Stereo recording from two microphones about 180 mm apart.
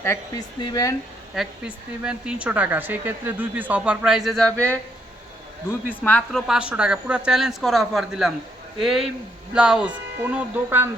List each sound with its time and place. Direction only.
0.0 s speech: 15° left (ahead or behind)
1.4 s a woman's voice: 5° right (ahead or behind)
5.9 s a woman's voice: 10° left (ahead or behind); by 10.8 s 10° right (ahead or behind)